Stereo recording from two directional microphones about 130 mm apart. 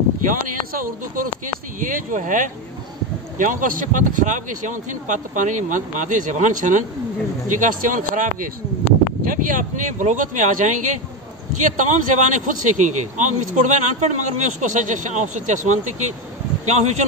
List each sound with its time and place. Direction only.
0.2 s a man's voice: 90° right; by 16.9 s 60° right (ahead or behind)